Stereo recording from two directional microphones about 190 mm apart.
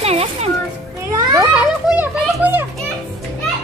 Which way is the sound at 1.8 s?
5° right (ahead or behind).